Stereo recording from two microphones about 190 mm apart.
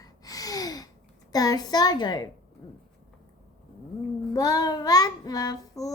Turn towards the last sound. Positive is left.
turn(degrees=20)  # may be behind; listen again after turning